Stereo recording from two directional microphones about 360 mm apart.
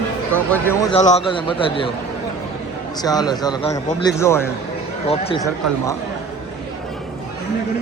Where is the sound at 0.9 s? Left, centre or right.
Centre.